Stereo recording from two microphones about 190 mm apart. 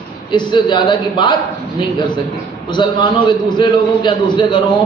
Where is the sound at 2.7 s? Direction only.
25° left (ahead or behind).